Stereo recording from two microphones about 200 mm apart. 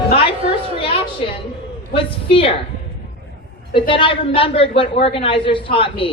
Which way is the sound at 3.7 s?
25° left (ahead or behind).